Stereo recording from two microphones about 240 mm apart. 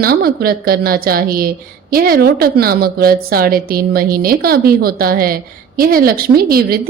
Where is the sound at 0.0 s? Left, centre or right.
Right.